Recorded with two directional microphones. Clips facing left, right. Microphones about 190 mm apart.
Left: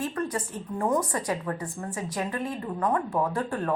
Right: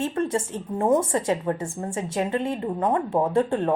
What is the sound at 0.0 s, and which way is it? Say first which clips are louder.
A woman's voice: right 5 dB; 25° right (ahead or behind).